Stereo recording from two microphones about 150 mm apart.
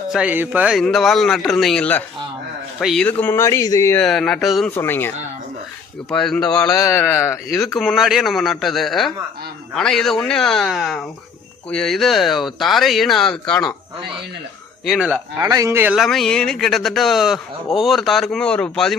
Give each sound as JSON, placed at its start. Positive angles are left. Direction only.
{"t": 0.1, "sound": "speech", "side_deg": -10}
{"t": 3.1, "sound": "speech", "side_deg": 10}
{"t": 4.0, "sound": "speech", "side_deg": 5}
{"t": 4.7, "sound": "speech", "side_deg": 15}
{"t": 6.7, "sound": "speech", "side_deg": 20}
{"t": 7.6, "sound": "speech", "side_deg": 0}
{"t": 14.8, "sound": "speech", "side_deg": -5}
{"t": 15.4, "sound": "a man's voice", "side_deg": -20}
{"t": 16.0, "sound": "speech", "side_deg": 0}